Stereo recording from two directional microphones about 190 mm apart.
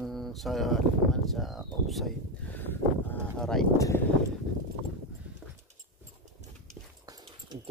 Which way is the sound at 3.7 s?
15° left (ahead or behind).